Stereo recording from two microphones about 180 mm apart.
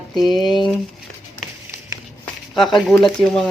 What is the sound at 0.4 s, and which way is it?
Speech, centre (ahead or behind).